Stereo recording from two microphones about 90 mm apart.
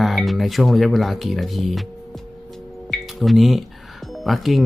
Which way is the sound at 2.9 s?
Centre (ahead or behind).